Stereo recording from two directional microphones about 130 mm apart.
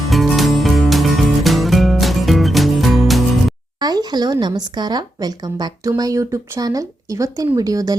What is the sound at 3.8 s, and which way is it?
Speech, 30° right (ahead or behind).